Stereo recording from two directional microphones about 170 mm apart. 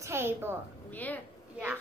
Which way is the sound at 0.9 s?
10° left (ahead or behind).